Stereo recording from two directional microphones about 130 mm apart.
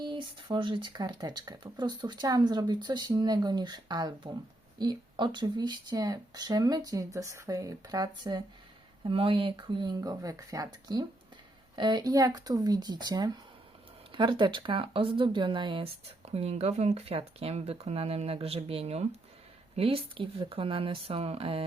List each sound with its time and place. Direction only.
0.0 s speech: 40° right (ahead or behind)